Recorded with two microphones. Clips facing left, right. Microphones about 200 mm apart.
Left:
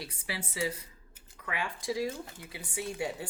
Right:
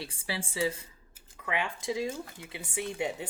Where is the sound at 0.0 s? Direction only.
30° right (ahead or behind).